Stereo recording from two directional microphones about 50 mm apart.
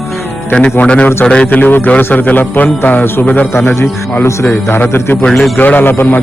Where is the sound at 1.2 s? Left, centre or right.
Left.